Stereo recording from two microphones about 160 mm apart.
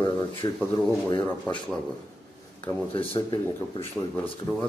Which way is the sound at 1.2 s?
10° left (ahead or behind).